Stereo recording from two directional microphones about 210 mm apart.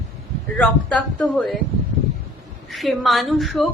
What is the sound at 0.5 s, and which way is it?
Speech, 5° left (ahead or behind).